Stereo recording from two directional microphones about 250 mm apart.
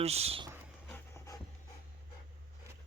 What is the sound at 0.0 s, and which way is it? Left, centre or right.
Speech, right.